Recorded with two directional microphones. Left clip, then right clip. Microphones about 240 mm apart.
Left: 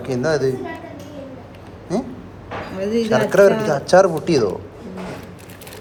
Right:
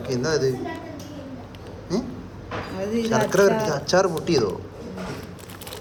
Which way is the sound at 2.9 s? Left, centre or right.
Left.